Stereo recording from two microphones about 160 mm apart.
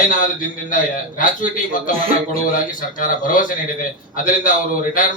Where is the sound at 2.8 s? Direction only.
55° left (ahead or behind).